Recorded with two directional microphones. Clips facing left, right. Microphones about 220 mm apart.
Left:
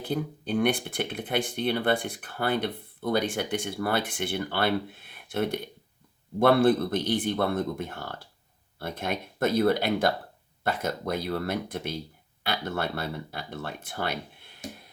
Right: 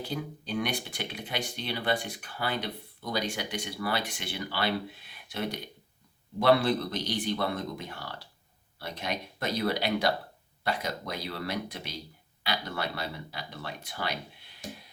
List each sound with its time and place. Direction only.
0.0 s speech: 55° left (ahead or behind)